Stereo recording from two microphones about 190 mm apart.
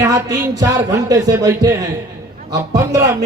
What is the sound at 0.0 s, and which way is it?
Speech, 20° right (ahead or behind).